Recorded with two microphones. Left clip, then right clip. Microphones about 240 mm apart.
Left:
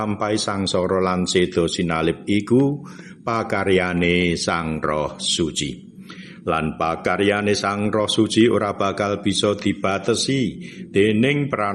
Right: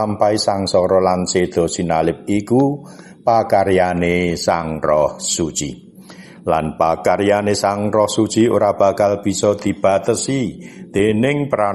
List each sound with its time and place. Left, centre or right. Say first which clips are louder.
0.0 s a man's voice: right 7 dB; centre